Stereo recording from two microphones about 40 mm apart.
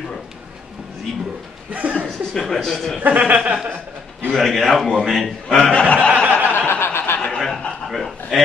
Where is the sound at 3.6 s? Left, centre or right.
Right.